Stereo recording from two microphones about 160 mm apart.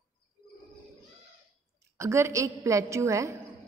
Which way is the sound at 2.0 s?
15° right (ahead or behind).